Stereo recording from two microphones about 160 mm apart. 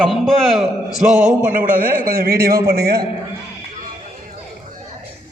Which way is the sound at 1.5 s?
55° right (ahead or behind).